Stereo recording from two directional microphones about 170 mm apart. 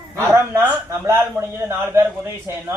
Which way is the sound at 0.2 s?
15° right (ahead or behind).